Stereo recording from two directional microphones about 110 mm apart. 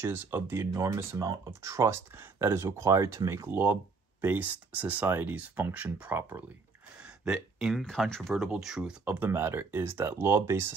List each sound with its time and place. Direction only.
0.0 s speech: 20° right (ahead or behind)
7.0 s a sound: 5° right (ahead or behind)
7.8 s speech: 5° left (ahead or behind); by 10.7 s 20° right (ahead or behind)